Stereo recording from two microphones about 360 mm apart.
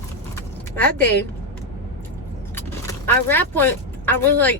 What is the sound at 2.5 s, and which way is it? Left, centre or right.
Speech, centre.